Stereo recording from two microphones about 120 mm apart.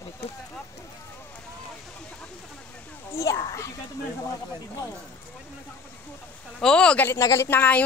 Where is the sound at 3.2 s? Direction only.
30° left (ahead or behind).